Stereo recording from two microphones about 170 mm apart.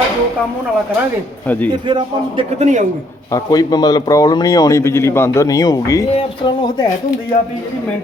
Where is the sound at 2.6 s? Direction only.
45° right (ahead or behind).